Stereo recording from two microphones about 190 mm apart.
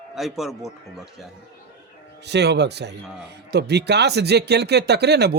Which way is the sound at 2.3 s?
65° right (ahead or behind).